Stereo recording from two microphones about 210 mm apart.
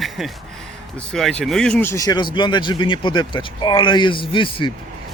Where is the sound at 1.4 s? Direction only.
Centre (ahead or behind).